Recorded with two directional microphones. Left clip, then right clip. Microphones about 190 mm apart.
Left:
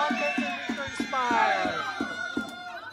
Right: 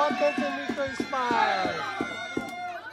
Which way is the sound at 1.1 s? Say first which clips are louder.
Left 1 dB; 15° right (ahead or behind).